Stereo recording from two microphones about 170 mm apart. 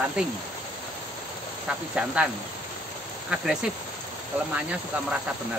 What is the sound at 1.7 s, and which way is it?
Speech, 5° right (ahead or behind).